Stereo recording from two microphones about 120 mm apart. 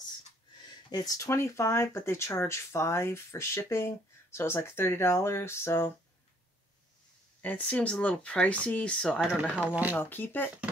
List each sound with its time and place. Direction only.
0.8 s speech: 35° left (ahead or behind)
7.4 s speech: 10° left (ahead or behind); by 9.9 s 15° right (ahead or behind)
9.9 s speech: 15° left (ahead or behind)